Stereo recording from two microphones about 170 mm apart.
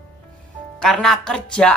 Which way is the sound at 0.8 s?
5° left (ahead or behind).